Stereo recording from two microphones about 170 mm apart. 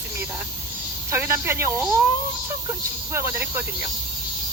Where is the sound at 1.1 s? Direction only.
15° right (ahead or behind).